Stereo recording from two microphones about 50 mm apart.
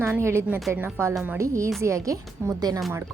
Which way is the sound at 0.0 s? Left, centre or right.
Right.